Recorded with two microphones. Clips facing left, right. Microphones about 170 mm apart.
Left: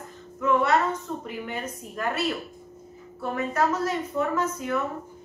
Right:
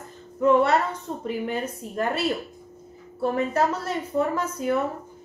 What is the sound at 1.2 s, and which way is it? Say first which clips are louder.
Speech: right 5 dB; 30° right (ahead or behind).